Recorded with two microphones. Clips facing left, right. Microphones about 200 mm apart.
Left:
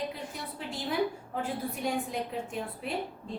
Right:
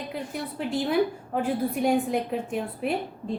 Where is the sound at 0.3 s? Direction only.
65° right (ahead or behind).